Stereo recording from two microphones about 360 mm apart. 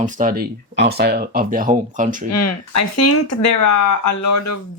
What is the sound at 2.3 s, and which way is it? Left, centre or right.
Speech, left.